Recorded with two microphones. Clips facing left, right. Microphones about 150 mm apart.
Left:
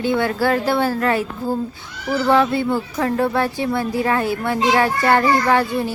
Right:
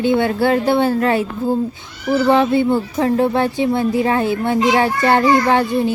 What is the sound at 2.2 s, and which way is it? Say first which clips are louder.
A woman's voice: right 2 dB; 20° right (ahead or behind).